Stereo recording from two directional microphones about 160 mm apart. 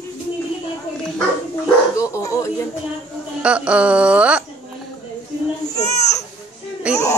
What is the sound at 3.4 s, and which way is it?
Speech, 5° right (ahead or behind).